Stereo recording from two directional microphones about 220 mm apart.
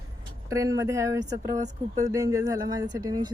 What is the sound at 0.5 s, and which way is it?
Speech, 15° right (ahead or behind).